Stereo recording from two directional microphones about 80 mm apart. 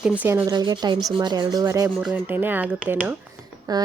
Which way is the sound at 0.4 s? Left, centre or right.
Right.